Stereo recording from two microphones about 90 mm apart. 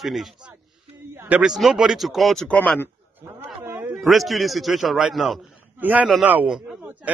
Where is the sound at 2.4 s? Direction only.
15° left (ahead or behind).